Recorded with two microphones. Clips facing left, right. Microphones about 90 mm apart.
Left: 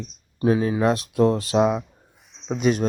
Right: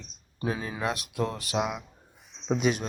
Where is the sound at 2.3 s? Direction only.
Centre (ahead or behind).